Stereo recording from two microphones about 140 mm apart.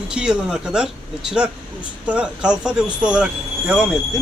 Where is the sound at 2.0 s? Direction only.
10° right (ahead or behind).